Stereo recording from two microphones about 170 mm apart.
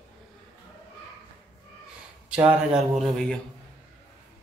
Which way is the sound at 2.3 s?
10° right (ahead or behind).